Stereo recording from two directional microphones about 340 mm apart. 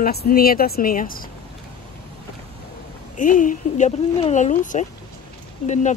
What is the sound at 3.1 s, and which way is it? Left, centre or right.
Speech, left.